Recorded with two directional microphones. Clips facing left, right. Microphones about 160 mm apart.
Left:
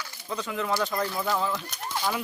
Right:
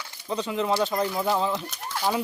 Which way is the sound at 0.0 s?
30° right (ahead or behind).